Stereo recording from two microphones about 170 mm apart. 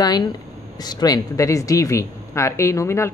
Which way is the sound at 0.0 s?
20° left (ahead or behind).